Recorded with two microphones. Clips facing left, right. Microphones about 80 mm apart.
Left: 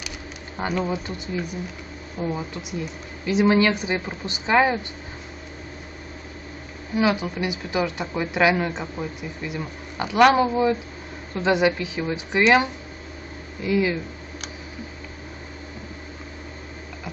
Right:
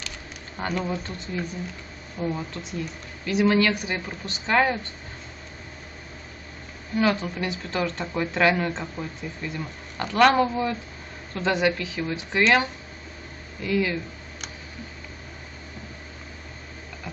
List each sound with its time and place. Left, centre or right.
0.8 s speech: centre
3.3 s speech: left
7.0 s speech: centre